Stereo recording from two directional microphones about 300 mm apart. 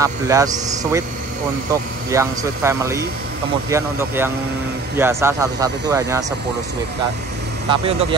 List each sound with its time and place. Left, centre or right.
0.0 s speech: centre
7.7 s speech: centre